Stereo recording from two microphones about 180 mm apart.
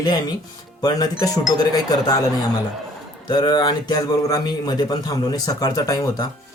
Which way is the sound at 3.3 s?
25° left (ahead or behind).